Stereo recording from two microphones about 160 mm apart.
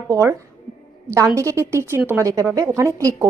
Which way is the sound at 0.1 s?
20° right (ahead or behind).